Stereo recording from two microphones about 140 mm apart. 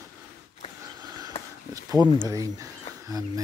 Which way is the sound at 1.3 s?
45° left (ahead or behind).